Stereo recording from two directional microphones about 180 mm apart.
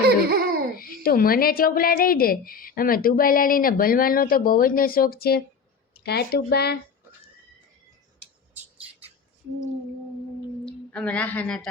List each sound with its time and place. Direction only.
0.0 s a sound: 60° right (ahead or behind)
0.8 s speech: 55° left (ahead or behind)
10.7 s a woman's voice: 5° left (ahead or behind)